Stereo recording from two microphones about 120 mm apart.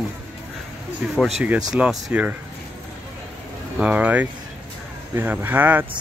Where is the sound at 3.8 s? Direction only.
10° right (ahead or behind).